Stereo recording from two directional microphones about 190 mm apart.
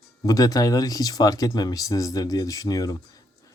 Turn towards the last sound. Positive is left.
turn(degrees=20)  # may be behind; listen again after turning